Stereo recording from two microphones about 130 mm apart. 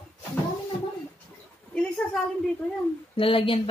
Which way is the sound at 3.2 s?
45° left (ahead or behind).